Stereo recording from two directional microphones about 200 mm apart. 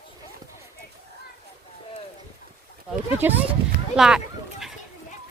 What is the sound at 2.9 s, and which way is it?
Speech, 10° right (ahead or behind).